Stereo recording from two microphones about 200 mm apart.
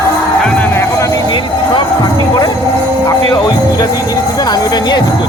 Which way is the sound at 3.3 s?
20° left (ahead or behind).